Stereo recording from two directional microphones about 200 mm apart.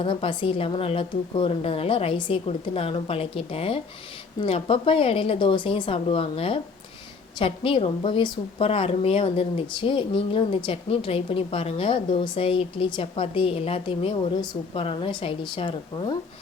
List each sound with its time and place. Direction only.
0.0 s a woman's voice: 25° left (ahead or behind)